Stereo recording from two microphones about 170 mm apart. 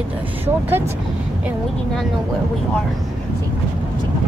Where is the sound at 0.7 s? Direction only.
15° right (ahead or behind).